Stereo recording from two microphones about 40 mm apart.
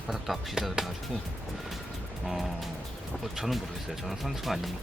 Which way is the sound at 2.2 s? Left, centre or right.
Centre.